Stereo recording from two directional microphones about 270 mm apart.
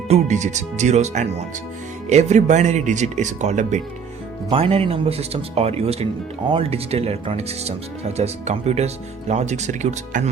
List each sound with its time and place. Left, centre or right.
0.1 s speech: right